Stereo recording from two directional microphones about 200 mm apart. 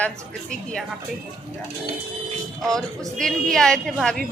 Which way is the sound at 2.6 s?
Centre (ahead or behind).